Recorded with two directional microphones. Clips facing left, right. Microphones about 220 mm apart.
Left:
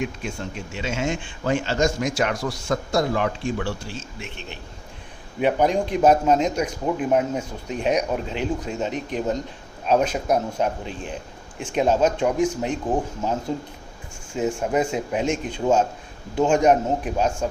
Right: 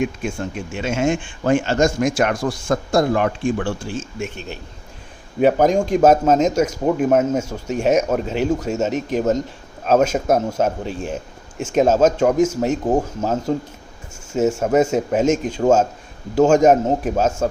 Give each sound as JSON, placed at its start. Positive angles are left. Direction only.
{"t": 0.0, "sound": "speech", "side_deg": -50}